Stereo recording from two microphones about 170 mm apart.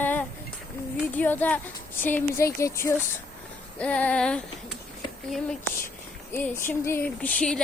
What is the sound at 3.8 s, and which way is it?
Speech, 5° left (ahead or behind).